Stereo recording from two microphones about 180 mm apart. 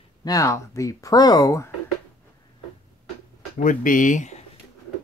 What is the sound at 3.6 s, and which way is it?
Speech, 50° left (ahead or behind).